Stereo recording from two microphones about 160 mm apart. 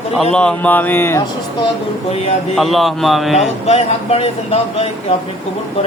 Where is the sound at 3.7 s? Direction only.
40° left (ahead or behind).